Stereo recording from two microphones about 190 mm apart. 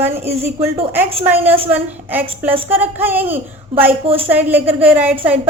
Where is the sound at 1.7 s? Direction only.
10° right (ahead or behind).